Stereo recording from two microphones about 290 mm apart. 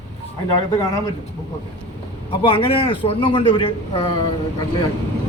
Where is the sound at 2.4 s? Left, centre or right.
Centre.